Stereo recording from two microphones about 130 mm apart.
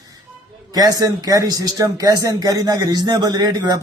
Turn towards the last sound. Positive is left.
turn(degrees=-30)  # may be behind; listen again after turning